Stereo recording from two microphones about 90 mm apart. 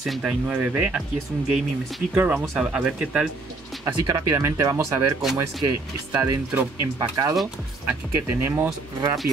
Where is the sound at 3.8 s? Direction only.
40° right (ahead or behind).